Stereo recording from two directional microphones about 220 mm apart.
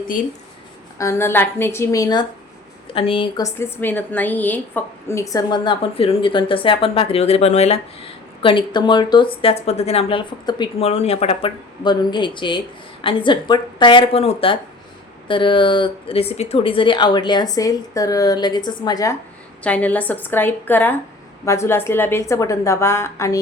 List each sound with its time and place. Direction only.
0.9 s a woman's voice: 10° left (ahead or behind)
19.6 s a woman's voice: 5° left (ahead or behind)